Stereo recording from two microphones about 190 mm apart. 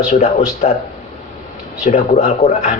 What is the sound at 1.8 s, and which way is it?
Speech, 40° left (ahead or behind).